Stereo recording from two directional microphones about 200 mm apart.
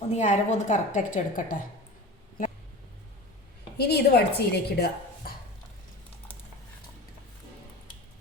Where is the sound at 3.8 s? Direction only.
55° left (ahead or behind).